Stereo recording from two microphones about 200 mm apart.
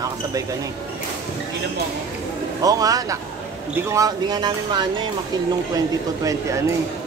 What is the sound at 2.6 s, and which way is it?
Speech, 20° right (ahead or behind).